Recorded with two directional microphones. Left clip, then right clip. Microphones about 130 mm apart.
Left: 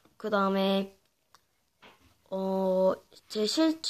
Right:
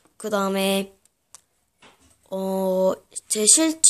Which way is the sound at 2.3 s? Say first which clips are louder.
Right 5 dB; 20° right (ahead or behind).